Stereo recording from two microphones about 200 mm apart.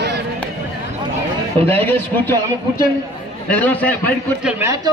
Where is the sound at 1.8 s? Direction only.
10° left (ahead or behind).